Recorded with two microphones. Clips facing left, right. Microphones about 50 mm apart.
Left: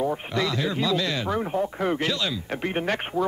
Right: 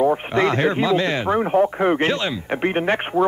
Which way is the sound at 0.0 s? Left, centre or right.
Right.